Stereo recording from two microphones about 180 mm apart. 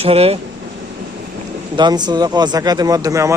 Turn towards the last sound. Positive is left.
turn(degrees=-15)  # may be behind; listen again after turning